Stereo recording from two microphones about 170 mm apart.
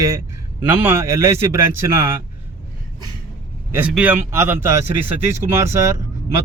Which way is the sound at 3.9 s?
10° right (ahead or behind).